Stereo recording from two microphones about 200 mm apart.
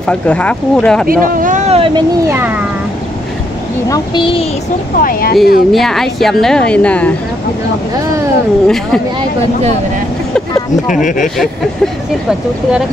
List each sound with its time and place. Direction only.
0.0 s speech: 5° left (ahead or behind)
1.0 s speech: 45° right (ahead or behind)
2.2 s a child's voice: 10° right (ahead or behind)
3.9 s speech: 25° left (ahead or behind)
5.0 s speech: 50° left (ahead or behind)
5.7 s speech: centre (ahead or behind)
8.6 s speech: centre (ahead or behind)
10.9 s speech: 40° left (ahead or behind)
11.3 s speech: centre (ahead or behind)